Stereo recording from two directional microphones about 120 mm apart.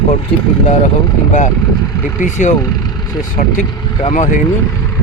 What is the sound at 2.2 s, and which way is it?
Speech, 90° left.